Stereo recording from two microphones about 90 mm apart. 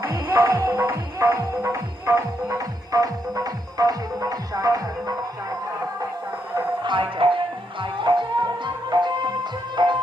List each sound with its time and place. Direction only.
0.0 s music: 25° right (ahead or behind); by 5.1 s 40° right (ahead or behind)
6.8 s music: 65° right (ahead or behind)